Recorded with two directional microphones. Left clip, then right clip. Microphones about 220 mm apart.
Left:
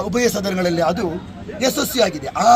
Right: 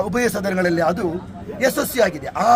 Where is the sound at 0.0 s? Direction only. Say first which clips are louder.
Left 1 dB; 10° right (ahead or behind).